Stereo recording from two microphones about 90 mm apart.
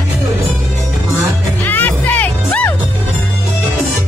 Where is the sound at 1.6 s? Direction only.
20° left (ahead or behind).